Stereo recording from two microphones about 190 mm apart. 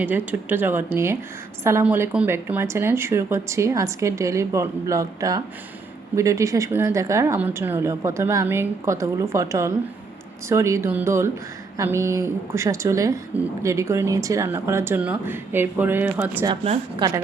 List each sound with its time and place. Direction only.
0.0 s speech: 10° right (ahead or behind)
17.0 s a woman's voice: 25° right (ahead or behind)